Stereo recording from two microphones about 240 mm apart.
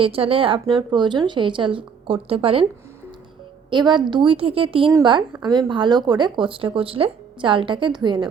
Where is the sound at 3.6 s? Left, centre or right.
Centre.